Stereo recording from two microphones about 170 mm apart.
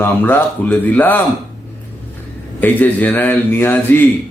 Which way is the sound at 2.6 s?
10° left (ahead or behind).